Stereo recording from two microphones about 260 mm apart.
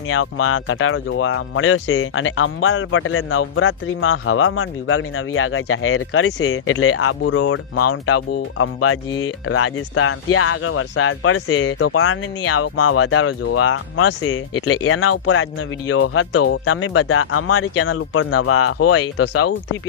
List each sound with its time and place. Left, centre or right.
0.1 s speech: left